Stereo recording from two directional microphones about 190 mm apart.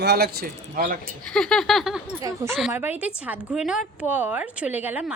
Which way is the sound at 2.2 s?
15° right (ahead or behind).